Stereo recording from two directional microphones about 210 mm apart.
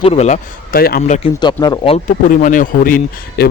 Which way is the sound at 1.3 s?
20° left (ahead or behind).